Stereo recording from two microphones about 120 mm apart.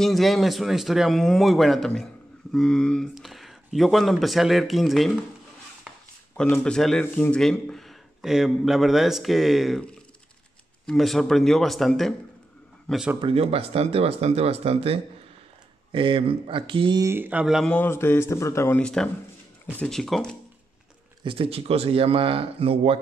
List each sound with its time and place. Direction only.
0.0 s speech: centre (ahead or behind)
6.3 s speech: 10° left (ahead or behind)
13.2 s speech: 55° right (ahead or behind)
17.0 s speech: 20° right (ahead or behind)
17.6 s speech: 15° left (ahead or behind)
18.8 s speech: 5° left (ahead or behind)
21.2 s speech: 45° right (ahead or behind)